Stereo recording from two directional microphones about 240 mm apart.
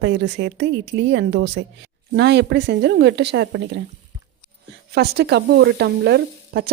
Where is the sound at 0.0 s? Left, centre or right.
Right.